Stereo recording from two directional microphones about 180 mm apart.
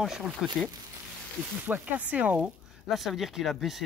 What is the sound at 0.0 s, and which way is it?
Speech, 5° right (ahead or behind).